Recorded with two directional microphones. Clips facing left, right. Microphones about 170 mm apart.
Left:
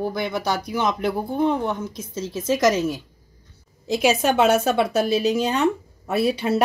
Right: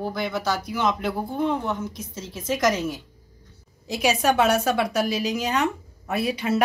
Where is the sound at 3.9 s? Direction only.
30° left (ahead or behind).